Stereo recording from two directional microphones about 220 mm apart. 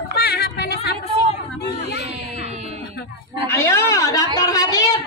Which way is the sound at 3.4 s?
10° left (ahead or behind).